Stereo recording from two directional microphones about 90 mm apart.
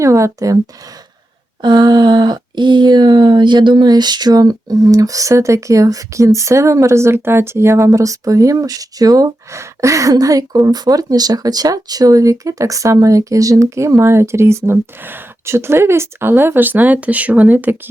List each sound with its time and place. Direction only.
0.0 s speech: 35° right (ahead or behind)
1.6 s speech: 55° right (ahead or behind); by 17.7 s 20° right (ahead or behind)